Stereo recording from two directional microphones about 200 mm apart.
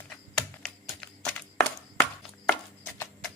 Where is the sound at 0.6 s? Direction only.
5° left (ahead or behind).